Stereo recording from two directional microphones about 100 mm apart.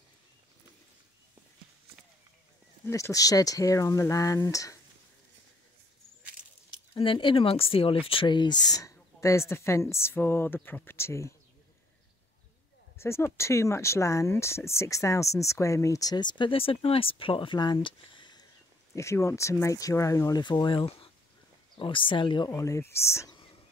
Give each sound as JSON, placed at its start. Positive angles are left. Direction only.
{"t": 2.9, "sound": "speech", "side_deg": 30}
{"t": 7.0, "sound": "speech", "side_deg": 60}
{"t": 8.1, "sound": "a woman's voice", "side_deg": 55}
{"t": 12.9, "sound": "speech", "side_deg": 25}
{"t": 17.7, "sound": "a sound", "side_deg": 55}
{"t": 18.9, "sound": "speech", "side_deg": 30}
{"t": 20.4, "sound": "speech", "side_deg": 50}
{"t": 22.6, "sound": "a woman's voice", "side_deg": 30}